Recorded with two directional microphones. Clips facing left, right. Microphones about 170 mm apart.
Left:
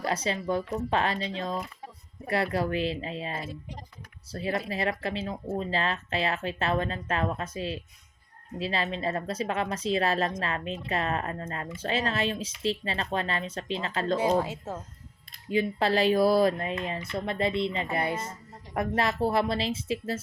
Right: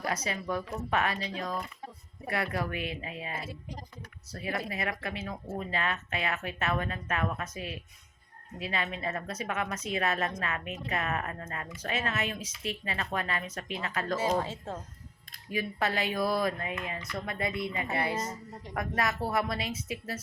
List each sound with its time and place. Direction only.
0.0 s speech: 30° left (ahead or behind)
3.3 s speech: 10° right (ahead or behind)
4.3 s speech: 30° left (ahead or behind)
14.3 s speech: 10° left (ahead or behind)
15.4 s speech: 30° left (ahead or behind)